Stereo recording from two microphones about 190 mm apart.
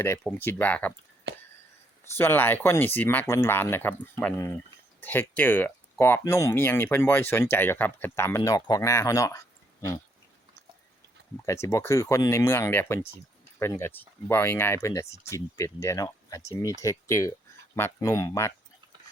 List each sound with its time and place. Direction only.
0.3 s speech: 10° left (ahead or behind)
1.3 s a sound: 65° right (ahead or behind)
2.1 s speech: 10° left (ahead or behind)
11.4 s speech: 15° left (ahead or behind)